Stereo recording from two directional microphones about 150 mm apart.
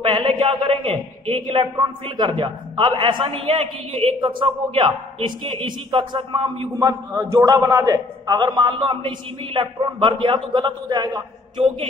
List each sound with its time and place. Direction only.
0.0 s a man's voice: 35° right (ahead or behind)
6.8 s a man's voice: 20° right (ahead or behind)